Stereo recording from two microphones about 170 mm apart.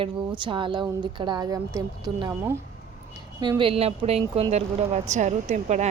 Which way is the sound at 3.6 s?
35° right (ahead or behind).